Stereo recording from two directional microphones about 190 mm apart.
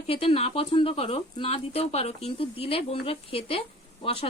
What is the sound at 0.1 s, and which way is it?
Speech, 30° left (ahead or behind).